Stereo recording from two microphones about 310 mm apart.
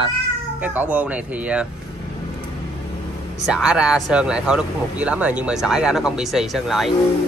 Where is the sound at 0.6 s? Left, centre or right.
Centre.